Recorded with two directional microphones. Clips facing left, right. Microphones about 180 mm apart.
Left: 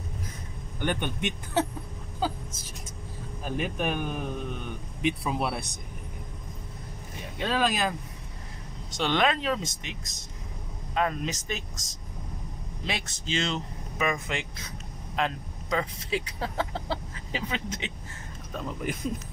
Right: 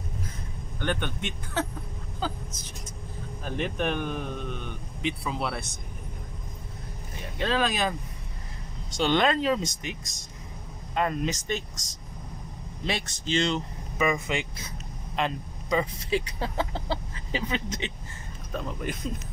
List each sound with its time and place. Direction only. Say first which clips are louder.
0.7 s speech: left 1 dB; 15° left (ahead or behind)
7.3 s speech: even; 5° left (ahead or behind)
8.9 s speech: right 2 dB; centre (ahead or behind)
12.8 s speech: right 3 dB; centre (ahead or behind)